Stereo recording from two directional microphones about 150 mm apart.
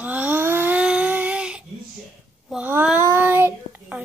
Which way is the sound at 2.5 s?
10° right (ahead or behind).